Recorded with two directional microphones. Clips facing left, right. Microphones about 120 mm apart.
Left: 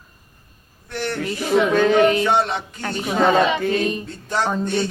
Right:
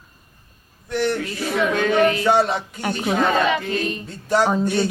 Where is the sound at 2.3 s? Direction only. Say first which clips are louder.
Right 2 dB; centre (ahead or behind).